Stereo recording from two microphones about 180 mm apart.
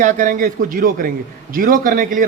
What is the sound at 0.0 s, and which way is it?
A man's voice, 45° right (ahead or behind).